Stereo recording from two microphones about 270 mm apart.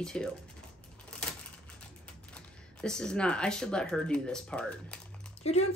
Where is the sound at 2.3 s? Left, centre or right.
Centre.